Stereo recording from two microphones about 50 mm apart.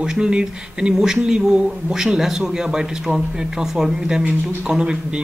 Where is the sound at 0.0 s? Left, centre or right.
Centre.